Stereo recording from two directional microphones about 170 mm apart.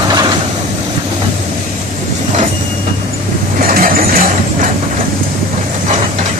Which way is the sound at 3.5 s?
55° right (ahead or behind).